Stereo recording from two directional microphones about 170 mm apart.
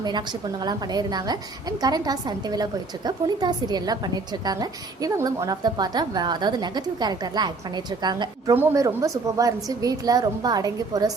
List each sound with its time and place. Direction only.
0.0 s a woman's voice: 25° right (ahead or behind)